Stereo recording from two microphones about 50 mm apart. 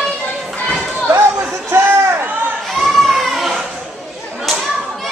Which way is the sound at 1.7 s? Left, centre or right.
Right.